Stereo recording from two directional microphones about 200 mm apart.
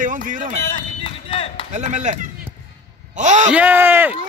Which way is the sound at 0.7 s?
25° left (ahead or behind).